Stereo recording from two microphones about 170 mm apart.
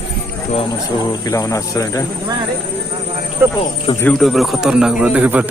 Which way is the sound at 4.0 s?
5° left (ahead or behind).